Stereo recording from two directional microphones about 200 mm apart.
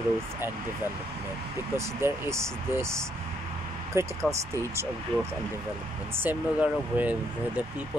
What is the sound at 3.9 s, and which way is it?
Speech, 15° right (ahead or behind).